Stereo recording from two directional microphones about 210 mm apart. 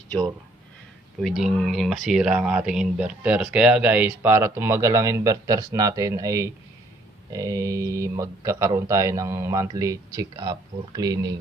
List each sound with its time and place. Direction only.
1.2 s speech: centre (ahead or behind); by 11.3 s 15° right (ahead or behind)